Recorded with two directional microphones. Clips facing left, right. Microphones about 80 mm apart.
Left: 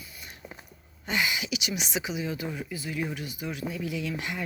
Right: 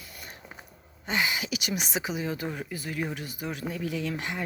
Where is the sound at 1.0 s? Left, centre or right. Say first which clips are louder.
Even; right.